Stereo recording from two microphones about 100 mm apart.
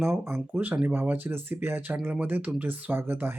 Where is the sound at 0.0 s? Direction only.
25° right (ahead or behind).